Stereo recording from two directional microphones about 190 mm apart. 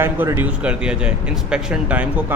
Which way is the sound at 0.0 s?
10° right (ahead or behind).